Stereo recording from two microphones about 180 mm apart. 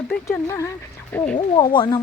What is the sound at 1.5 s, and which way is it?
Speech, 25° left (ahead or behind).